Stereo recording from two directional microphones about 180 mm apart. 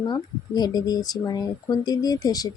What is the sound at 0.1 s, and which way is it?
Speech, 20° left (ahead or behind).